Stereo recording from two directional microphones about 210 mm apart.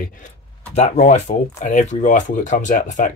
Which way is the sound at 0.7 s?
35° left (ahead or behind).